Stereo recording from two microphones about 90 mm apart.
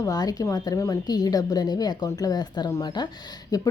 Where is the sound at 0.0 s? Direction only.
45° left (ahead or behind).